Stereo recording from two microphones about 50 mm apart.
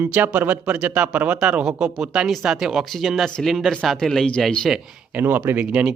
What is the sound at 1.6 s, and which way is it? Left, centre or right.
Speech, centre.